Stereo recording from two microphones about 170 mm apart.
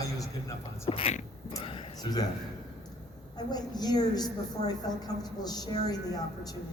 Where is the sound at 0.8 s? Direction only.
35° left (ahead or behind).